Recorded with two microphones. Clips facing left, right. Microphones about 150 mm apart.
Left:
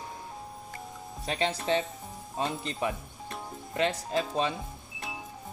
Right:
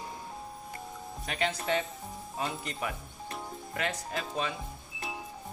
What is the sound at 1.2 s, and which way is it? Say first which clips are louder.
Speech: left 3 dB; 25° left (ahead or behind).